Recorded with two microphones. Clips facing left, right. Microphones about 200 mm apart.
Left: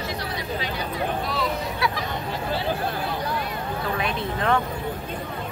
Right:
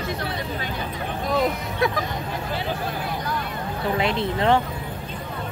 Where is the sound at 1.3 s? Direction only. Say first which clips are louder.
Right 4 dB; 45° right (ahead or behind).